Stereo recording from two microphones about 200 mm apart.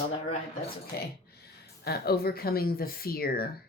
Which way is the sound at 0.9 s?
50° left (ahead or behind).